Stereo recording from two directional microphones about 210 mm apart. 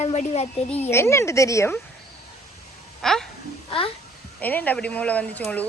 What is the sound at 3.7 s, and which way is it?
Speech, 25° left (ahead or behind).